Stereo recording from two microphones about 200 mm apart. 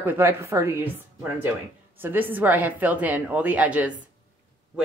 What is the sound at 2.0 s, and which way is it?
A woman's voice, 10° right (ahead or behind).